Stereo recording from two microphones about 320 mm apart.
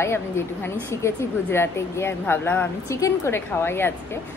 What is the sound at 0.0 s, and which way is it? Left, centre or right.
A woman's voice, centre.